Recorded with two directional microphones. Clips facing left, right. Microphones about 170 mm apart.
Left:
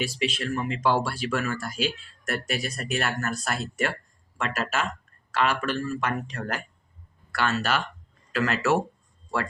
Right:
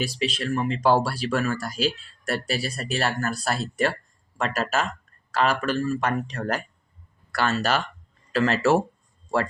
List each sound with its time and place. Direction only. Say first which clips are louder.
0.0 s speech: right 1 dB; 35° right (ahead or behind)